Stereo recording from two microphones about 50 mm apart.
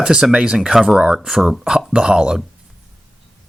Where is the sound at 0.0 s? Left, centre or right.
Centre.